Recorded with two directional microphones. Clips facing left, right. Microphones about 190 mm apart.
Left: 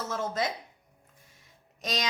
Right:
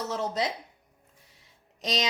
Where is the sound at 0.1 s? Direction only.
20° right (ahead or behind).